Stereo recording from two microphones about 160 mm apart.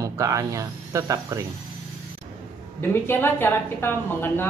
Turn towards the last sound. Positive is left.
turn(degrees=15)  # may be behind; listen again after turning